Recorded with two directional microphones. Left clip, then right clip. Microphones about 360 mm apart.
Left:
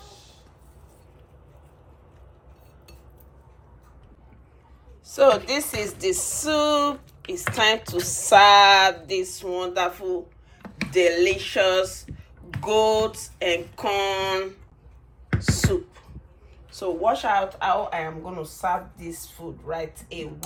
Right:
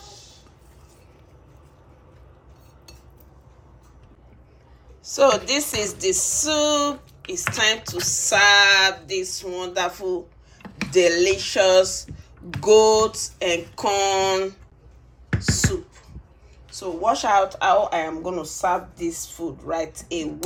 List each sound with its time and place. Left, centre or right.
5.0 s a sound: centre
10.6 s speech: centre
15.3 s beatboxing: centre
16.7 s speech: centre; by 18.5 s right